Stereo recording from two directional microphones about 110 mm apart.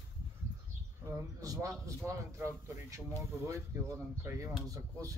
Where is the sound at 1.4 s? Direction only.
30° right (ahead or behind).